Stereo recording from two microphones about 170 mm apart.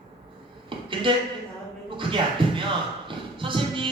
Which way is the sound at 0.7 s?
30° right (ahead or behind).